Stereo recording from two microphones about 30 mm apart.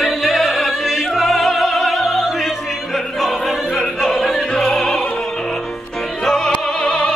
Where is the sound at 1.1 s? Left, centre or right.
Centre.